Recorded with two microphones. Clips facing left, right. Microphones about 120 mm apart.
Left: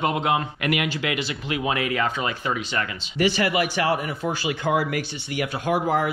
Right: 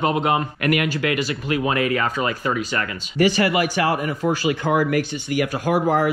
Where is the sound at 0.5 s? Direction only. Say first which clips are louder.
Right 4 dB; 45° right (ahead or behind).